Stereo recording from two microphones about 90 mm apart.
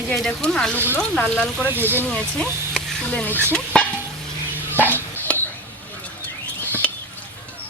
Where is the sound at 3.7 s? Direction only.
10° left (ahead or behind).